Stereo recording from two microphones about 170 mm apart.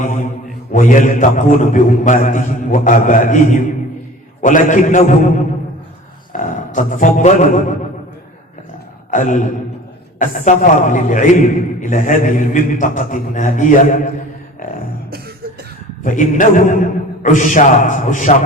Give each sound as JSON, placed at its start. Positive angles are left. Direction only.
{"t": 0.0, "sound": "a man's voice", "side_deg": 50}
{"t": 9.0, "sound": "a sound", "side_deg": 50}
{"t": 10.2, "sound": "a man's voice", "side_deg": 50}
{"t": 16.0, "sound": "a man's voice", "side_deg": 50}